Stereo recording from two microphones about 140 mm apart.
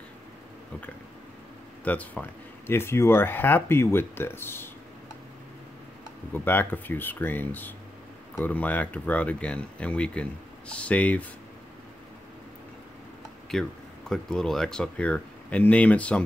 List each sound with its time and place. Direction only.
1.9 s speech: 10° left (ahead or behind)
6.3 s speech: 15° left (ahead or behind)
13.5 s speech: 5° left (ahead or behind)